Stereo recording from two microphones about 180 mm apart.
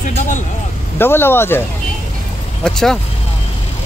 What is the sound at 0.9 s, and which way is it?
Speech, 10° left (ahead or behind).